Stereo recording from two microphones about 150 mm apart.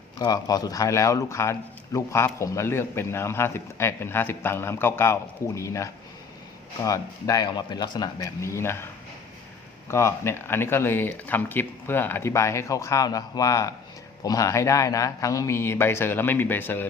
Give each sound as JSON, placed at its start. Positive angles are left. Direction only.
{"t": 0.2, "sound": "a man's voice", "side_deg": 25}
{"t": 9.9, "sound": "speech", "side_deg": 15}